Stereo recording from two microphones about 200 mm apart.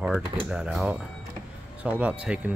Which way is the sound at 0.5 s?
5° right (ahead or behind).